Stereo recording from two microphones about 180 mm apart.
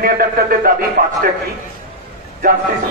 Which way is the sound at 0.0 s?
55° right (ahead or behind).